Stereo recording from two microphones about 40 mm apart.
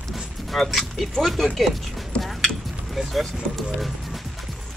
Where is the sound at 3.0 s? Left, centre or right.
Centre.